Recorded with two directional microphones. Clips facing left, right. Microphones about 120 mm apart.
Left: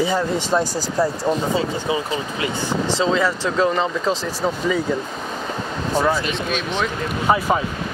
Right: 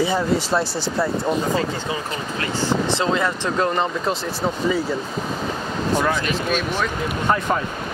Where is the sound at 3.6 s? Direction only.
5° right (ahead or behind).